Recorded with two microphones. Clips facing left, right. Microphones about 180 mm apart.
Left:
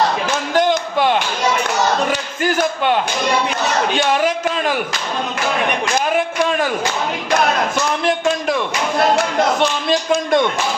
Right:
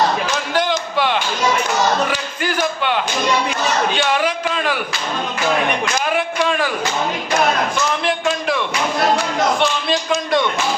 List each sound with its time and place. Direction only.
0.5 s basketball bounce: 45° left (ahead or behind)
2.0 s a sound: 45° left (ahead or behind)
3.9 s a man's voice: 45° left (ahead or behind)
6.1 s a man's voice: 40° left (ahead or behind)
9.9 s a man's voice: 50° left (ahead or behind)